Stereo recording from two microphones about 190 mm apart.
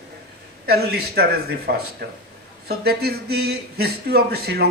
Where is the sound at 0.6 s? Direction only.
55° right (ahead or behind).